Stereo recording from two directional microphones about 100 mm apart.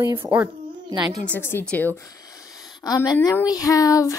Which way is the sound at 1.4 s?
20° left (ahead or behind).